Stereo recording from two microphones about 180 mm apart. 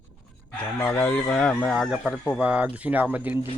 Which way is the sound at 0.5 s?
5° left (ahead or behind).